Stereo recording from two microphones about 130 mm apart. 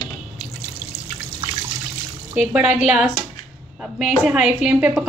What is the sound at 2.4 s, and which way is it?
A woman's voice, 10° right (ahead or behind).